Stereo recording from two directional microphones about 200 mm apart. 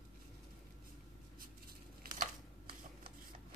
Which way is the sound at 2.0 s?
45° right (ahead or behind).